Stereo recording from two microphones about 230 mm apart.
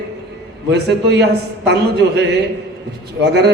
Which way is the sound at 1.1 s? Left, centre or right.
Right.